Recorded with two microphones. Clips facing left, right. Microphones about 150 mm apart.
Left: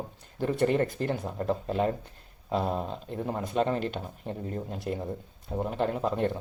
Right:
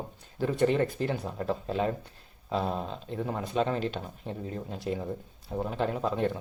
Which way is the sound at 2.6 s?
5° left (ahead or behind).